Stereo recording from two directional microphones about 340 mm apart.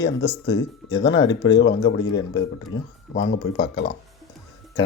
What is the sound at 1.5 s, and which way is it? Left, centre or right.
Speech, left.